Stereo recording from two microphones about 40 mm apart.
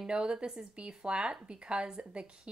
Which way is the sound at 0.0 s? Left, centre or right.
Right.